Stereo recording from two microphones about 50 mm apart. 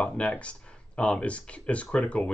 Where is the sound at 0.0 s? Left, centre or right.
Left.